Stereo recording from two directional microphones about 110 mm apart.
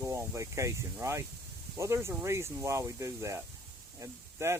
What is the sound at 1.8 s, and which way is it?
Speech, 25° right (ahead or behind).